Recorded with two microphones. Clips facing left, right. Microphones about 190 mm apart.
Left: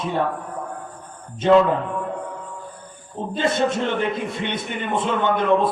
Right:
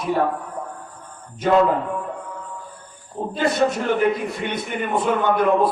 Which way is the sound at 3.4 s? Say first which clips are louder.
Right 1 dB; 25° left (ahead or behind).